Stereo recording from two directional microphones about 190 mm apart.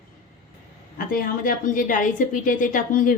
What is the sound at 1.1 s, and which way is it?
A woman's voice, 50° left (ahead or behind).